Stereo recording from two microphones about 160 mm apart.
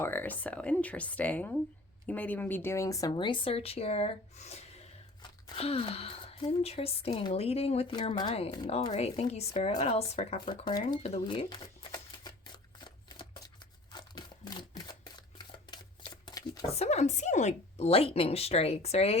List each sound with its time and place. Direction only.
0.0 s speech: 15° left (ahead or behind); by 12.3 s 30° left (ahead or behind)
12.8 s shuffling cards: 30° left (ahead or behind)
13.9 s a sound: 25° left (ahead or behind)
16.7 s speech: 40° left (ahead or behind)